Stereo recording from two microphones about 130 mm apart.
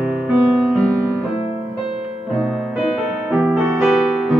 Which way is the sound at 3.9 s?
Centre (ahead or behind).